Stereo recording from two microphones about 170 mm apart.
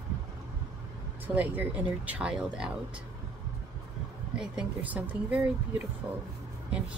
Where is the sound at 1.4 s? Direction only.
10° right (ahead or behind).